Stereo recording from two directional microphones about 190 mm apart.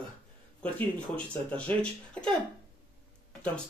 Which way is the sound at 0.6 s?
5° left (ahead or behind).